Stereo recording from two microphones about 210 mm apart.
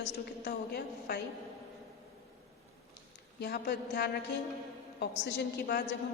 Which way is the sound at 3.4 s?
50° left (ahead or behind).